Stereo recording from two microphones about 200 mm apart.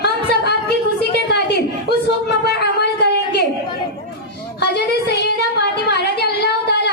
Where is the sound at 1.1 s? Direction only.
55° left (ahead or behind).